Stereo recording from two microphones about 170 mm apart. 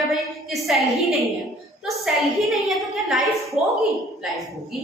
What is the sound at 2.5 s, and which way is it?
A woman's voice, centre (ahead or behind).